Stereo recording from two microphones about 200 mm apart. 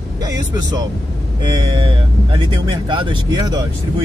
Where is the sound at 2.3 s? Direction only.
25° right (ahead or behind).